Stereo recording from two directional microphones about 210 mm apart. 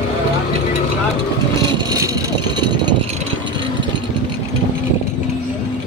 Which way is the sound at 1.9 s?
15° right (ahead or behind).